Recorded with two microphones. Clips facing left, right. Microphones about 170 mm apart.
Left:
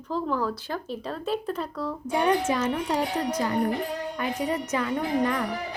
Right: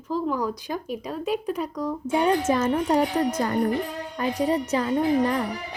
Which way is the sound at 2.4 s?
45° right (ahead or behind).